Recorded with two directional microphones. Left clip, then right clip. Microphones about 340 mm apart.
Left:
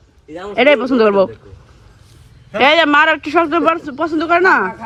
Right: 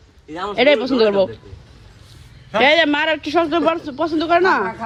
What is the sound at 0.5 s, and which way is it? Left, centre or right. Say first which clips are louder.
Speech: left 3 dB; centre.